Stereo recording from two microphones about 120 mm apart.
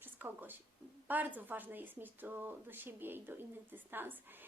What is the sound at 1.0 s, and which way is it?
Speech, 15° right (ahead or behind).